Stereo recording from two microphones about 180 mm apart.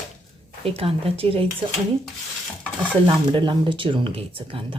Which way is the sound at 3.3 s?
25° right (ahead or behind).